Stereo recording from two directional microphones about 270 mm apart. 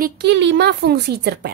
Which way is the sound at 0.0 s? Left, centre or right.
Right.